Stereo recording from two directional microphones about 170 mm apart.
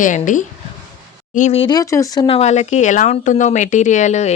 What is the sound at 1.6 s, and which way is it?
Speech, 20° left (ahead or behind).